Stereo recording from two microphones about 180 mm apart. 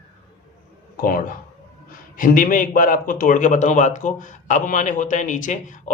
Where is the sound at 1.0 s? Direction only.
50° left (ahead or behind).